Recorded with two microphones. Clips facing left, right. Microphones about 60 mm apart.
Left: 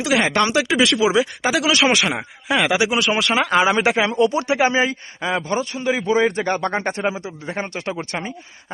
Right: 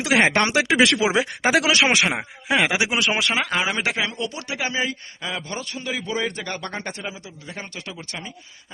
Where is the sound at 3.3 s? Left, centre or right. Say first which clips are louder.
Left 6 dB; centre.